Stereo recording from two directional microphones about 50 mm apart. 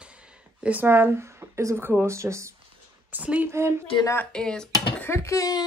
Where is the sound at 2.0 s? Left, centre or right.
Right.